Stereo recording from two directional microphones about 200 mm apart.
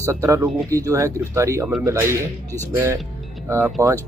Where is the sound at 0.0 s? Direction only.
15° right (ahead or behind).